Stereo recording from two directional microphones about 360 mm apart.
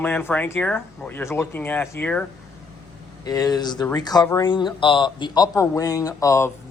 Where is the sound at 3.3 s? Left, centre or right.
Centre.